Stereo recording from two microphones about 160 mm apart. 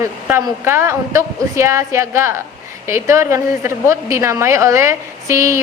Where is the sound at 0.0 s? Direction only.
15° right (ahead or behind).